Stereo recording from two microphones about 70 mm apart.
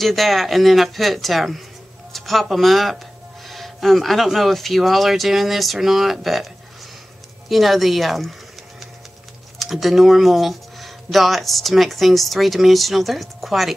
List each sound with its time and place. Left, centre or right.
0.0 s speech: centre